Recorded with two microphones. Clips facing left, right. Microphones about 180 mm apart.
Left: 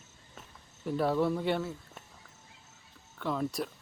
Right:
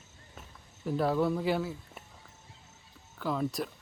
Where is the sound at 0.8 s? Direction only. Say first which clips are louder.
Even; centre (ahead or behind).